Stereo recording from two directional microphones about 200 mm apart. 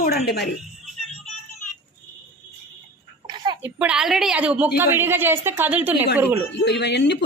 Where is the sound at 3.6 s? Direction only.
10° right (ahead or behind).